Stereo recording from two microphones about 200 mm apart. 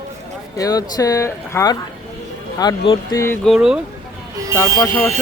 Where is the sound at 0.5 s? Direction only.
15° left (ahead or behind).